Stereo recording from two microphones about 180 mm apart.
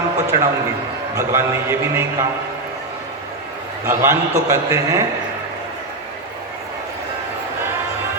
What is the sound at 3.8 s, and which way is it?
A man's voice, 15° right (ahead or behind).